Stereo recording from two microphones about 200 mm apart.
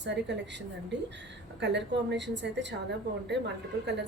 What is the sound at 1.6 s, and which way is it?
A woman's voice, 60° right (ahead or behind).